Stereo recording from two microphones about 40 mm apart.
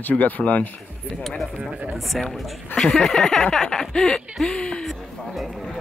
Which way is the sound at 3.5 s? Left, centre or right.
Centre.